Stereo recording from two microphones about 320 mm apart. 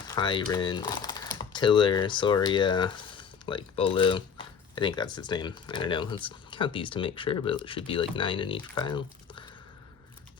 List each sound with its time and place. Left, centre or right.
0.1 s speech: centre